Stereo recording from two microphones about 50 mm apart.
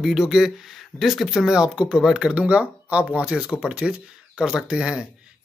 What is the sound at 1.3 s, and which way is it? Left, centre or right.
A man's voice, centre.